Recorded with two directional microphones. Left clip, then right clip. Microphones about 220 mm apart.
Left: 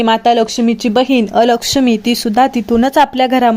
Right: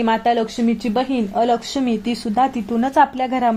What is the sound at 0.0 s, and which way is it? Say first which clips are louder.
Speech: left 7 dB; 20° left (ahead or behind).